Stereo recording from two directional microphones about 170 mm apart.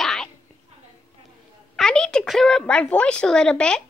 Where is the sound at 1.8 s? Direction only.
5° left (ahead or behind).